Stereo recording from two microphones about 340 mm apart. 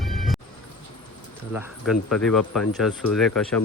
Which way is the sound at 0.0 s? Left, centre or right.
Centre.